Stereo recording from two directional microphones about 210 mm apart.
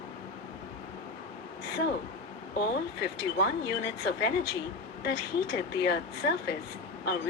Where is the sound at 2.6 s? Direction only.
50° left (ahead or behind).